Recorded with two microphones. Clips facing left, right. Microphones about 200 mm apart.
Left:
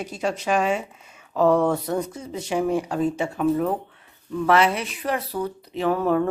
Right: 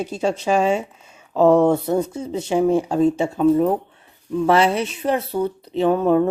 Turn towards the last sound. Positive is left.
turn(degrees=-20)  # may be behind; listen again after turning